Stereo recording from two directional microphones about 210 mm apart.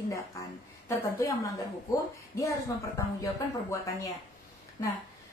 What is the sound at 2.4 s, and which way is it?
Speech, 15° left (ahead or behind).